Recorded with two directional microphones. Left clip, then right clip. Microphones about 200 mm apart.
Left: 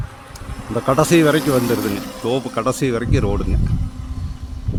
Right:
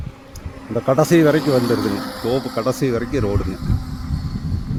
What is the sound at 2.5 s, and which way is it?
Speech, 5° left (ahead or behind).